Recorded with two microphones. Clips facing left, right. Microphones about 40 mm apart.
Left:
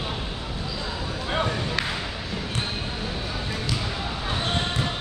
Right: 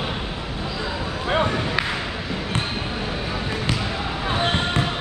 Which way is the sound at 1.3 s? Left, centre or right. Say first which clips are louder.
Right 5 dB; centre.